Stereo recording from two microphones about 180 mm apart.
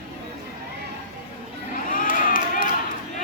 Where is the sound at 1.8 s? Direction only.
50° left (ahead or behind).